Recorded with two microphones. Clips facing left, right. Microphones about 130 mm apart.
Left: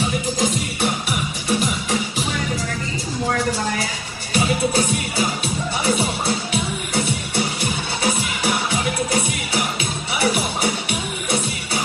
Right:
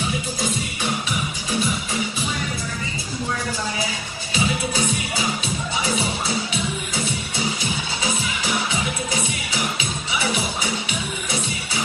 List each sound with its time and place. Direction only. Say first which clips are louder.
1.5 s music: left 4 dB; 75° left (ahead or behind)
4.4 s music: left 4 dB; 55° left (ahead or behind)
10.1 s music: left 4 dB; 55° left (ahead or behind)